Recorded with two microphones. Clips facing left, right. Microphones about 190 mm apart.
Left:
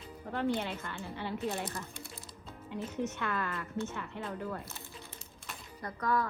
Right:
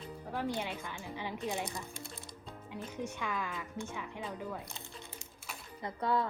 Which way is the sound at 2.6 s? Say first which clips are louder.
Left 5 dB; 10° right (ahead or behind).